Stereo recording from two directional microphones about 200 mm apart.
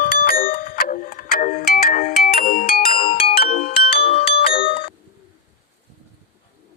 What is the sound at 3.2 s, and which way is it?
Music, 30° left (ahead or behind).